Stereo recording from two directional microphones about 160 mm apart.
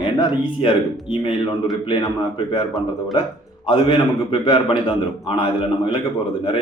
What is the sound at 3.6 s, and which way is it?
A man's voice, 35° left (ahead or behind).